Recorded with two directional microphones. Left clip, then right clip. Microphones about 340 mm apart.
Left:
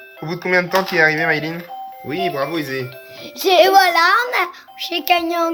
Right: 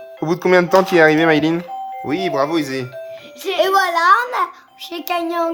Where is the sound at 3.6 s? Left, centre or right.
Centre.